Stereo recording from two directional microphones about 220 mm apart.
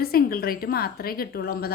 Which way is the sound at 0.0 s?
45° left (ahead or behind).